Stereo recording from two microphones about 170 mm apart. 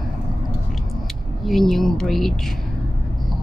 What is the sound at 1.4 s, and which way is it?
Speech, centre (ahead or behind).